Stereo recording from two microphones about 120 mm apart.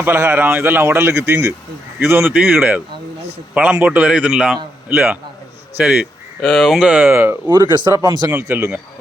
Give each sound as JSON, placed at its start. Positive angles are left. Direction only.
{"t": 0.0, "sound": "speech", "side_deg": -20}
{"t": 7.4, "sound": "speech", "side_deg": -35}
{"t": 8.3, "sound": "speech", "side_deg": -20}